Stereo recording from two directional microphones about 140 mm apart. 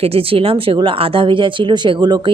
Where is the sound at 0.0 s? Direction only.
40° right (ahead or behind).